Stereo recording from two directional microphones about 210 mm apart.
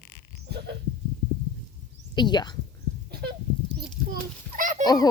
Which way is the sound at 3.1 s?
50° right (ahead or behind).